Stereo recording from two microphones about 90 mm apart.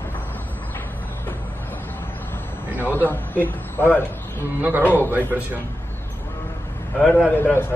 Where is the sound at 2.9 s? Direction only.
25° left (ahead or behind).